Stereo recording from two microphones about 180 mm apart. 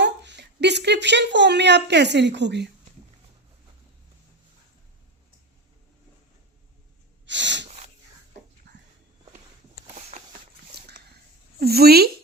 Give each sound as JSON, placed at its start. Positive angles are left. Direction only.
{"t": 0.0, "sound": "speech", "side_deg": -75}
{"t": 7.3, "sound": "sneeze", "side_deg": -80}
{"t": 8.7, "sound": "dog", "side_deg": -70}
{"t": 9.9, "sound": "a sound", "side_deg": -40}
{"t": 10.7, "sound": "dog", "side_deg": -60}
{"t": 11.6, "sound": "a sound", "side_deg": -60}